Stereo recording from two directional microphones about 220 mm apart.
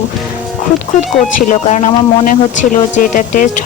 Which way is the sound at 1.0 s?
35° left (ahead or behind).